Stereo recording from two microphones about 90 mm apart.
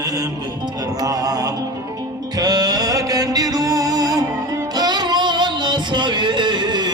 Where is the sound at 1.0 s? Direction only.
45° right (ahead or behind).